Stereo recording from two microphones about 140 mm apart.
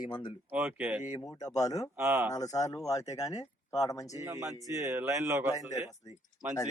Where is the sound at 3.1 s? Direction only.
25° left (ahead or behind).